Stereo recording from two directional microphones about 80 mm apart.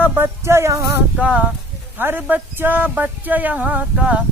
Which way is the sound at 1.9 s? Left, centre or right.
Right.